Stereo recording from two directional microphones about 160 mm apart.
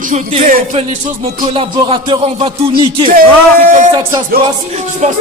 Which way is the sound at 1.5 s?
30° right (ahead or behind).